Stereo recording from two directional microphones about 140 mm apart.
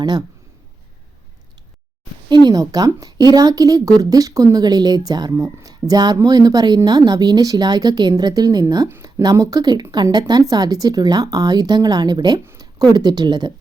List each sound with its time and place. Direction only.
0.0 s speech: 30° right (ahead or behind)
2.3 s speech: 30° right (ahead or behind)